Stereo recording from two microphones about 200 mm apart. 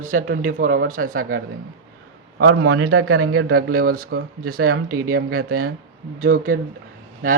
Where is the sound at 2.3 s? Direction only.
55° right (ahead or behind).